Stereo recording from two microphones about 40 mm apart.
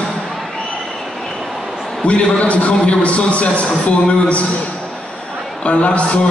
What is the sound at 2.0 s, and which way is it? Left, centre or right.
A man's voice, left.